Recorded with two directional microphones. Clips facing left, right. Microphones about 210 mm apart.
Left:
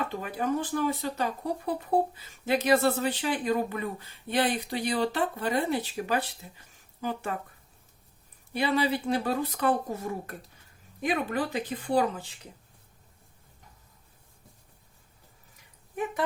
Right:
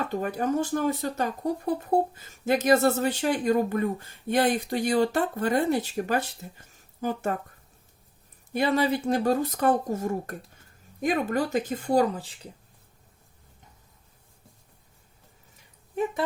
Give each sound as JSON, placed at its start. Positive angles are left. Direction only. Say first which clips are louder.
{"t": 0.1, "sound": "speech", "louder": "right 3 dB", "side_deg": -45}
{"t": 8.5, "sound": "speech", "louder": "right 3 dB", "side_deg": -45}